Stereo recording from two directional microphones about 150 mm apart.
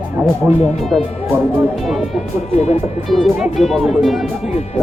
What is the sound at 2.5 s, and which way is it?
Speech, 45° left (ahead or behind).